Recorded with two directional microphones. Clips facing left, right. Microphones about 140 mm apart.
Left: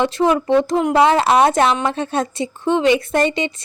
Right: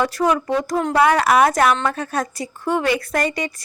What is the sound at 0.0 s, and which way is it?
A woman's voice, 25° left (ahead or behind).